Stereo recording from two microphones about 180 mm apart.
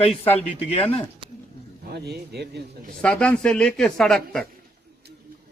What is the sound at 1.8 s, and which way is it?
Speech, 60° right (ahead or behind).